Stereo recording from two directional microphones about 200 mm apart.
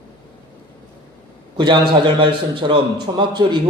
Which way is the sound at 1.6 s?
25° right (ahead or behind).